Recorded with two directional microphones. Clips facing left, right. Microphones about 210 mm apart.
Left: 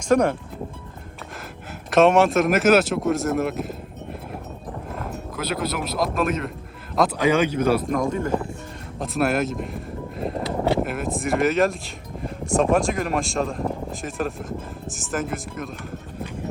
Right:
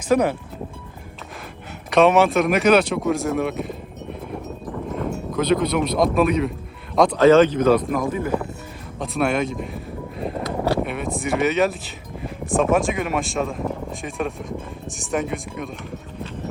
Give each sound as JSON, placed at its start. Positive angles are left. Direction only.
{"t": 0.1, "sound": "speech", "side_deg": -5}
{"t": 1.9, "sound": "speech", "side_deg": 0}
{"t": 5.3, "sound": "speech", "side_deg": 5}
{"t": 7.9, "sound": "speech", "side_deg": -5}